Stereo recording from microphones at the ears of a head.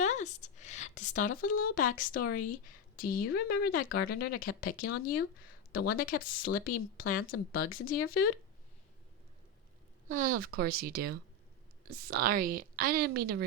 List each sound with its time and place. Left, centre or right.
0.1 s a woman's voice: left
10.1 s a woman's voice: right